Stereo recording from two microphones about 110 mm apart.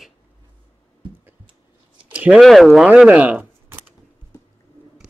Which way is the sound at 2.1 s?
10° right (ahead or behind).